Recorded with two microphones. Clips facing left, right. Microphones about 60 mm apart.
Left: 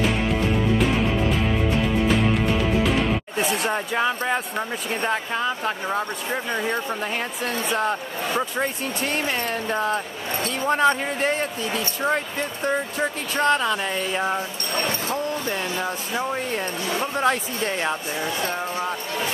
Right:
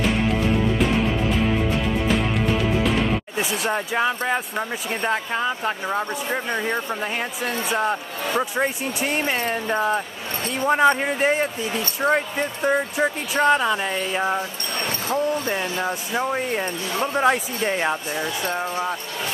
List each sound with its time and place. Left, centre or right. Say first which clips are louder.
0.0 s music: right 1 dB; centre
3.6 s speech: right 1 dB; centre
15.5 s speech: right 2 dB; centre